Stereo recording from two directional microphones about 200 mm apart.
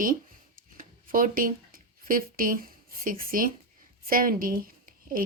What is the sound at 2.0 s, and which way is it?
Speech, 45° right (ahead or behind).